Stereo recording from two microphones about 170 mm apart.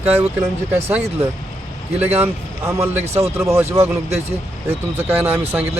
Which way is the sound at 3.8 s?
40° right (ahead or behind).